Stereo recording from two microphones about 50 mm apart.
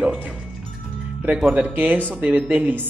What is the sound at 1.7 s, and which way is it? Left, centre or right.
A man's voice, right.